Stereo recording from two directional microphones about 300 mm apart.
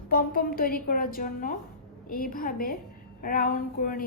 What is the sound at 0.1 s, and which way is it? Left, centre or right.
A woman's voice, left.